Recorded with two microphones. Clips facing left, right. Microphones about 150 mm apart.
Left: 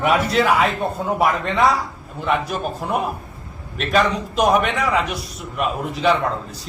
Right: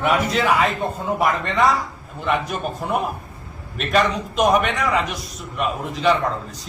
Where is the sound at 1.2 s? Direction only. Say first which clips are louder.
Left 1 dB; 10° left (ahead or behind).